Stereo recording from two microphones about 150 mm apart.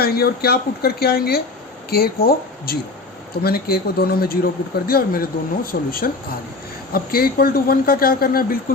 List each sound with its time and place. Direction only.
0.0 s speech: 90° left